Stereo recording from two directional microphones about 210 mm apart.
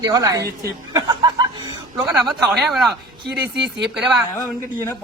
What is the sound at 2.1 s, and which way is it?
Speech, 5° right (ahead or behind).